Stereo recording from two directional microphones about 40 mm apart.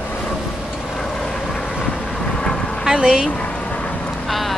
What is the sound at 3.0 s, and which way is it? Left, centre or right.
Speech, right.